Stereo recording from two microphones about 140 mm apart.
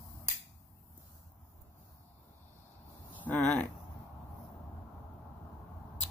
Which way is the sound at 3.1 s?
10° left (ahead or behind).